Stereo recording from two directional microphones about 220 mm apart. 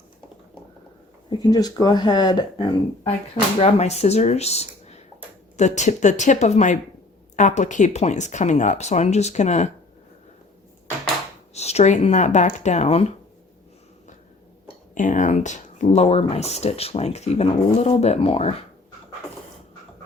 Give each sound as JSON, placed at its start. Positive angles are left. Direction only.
{"t": 1.3, "sound": "speech", "side_deg": 20}
{"t": 3.6, "sound": "speech", "side_deg": 30}
{"t": 11.5, "sound": "speech", "side_deg": 30}
{"t": 14.9, "sound": "speech", "side_deg": 35}